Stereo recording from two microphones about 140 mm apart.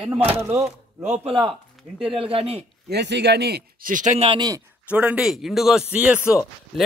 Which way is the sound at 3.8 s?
70° right (ahead or behind).